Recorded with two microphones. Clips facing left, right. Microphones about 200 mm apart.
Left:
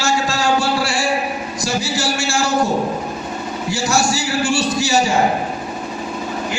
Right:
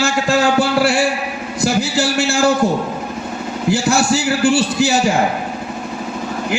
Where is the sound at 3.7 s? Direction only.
55° right (ahead or behind).